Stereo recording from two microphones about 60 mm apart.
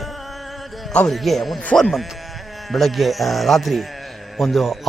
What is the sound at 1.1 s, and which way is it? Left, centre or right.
Speech, centre.